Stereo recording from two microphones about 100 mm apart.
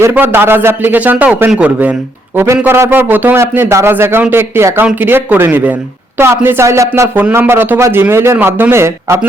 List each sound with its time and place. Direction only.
0.0 s a man's voice: 20° right (ahead or behind)
7.2 s a man's voice: 20° right (ahead or behind)